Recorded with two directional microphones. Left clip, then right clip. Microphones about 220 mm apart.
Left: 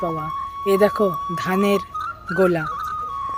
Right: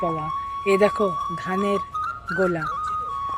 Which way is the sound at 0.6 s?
15° left (ahead or behind).